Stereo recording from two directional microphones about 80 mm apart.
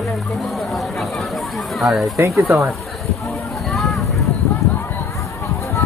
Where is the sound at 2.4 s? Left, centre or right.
Right.